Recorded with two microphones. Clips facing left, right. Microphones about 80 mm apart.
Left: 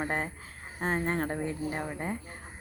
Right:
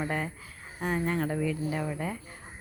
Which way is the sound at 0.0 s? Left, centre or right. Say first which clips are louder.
Even; left.